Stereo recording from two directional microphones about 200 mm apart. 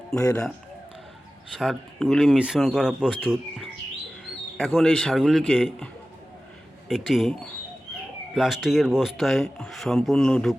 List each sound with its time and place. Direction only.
0.2 s a man's voice: 15° left (ahead or behind)
1.5 s speech: centre (ahead or behind)
8.4 s speech: centre (ahead or behind)